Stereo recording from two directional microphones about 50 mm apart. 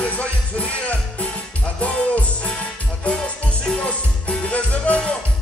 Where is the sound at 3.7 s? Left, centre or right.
Left.